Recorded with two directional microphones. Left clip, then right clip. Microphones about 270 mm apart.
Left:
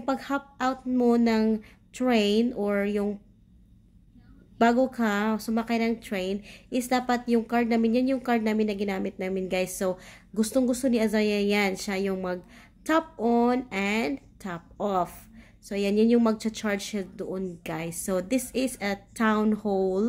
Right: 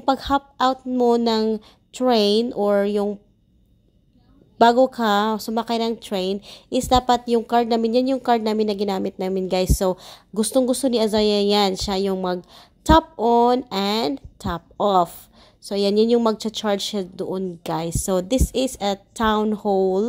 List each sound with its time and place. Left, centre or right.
0.0 s a woman's voice: right
4.6 s a woman's voice: centre